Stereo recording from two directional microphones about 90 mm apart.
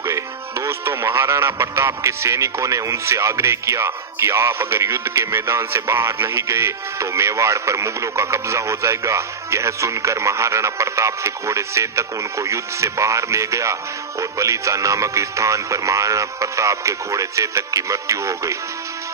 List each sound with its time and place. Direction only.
0.0 s speech: 35° right (ahead or behind)